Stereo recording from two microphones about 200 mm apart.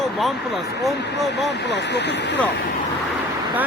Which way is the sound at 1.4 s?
60° left (ahead or behind).